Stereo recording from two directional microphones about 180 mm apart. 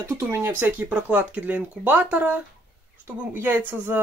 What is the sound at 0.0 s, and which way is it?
Speech, 15° right (ahead or behind).